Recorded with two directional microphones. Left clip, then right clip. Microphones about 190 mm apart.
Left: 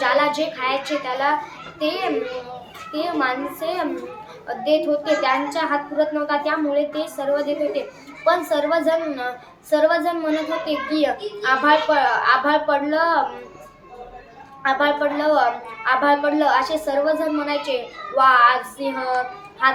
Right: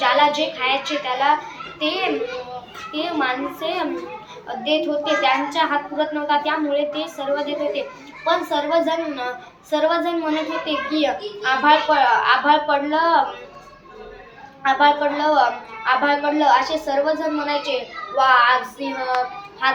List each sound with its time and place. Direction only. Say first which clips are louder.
0.0 s a woman's voice: right 2 dB; 15° left (ahead or behind)
14.6 s a woman's voice: right 3 dB; 15° left (ahead or behind)